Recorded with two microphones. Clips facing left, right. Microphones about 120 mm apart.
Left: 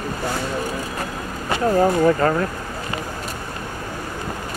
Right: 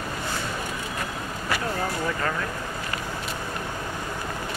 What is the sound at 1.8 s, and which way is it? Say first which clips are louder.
Speech: left 11 dB; 40° left (ahead or behind).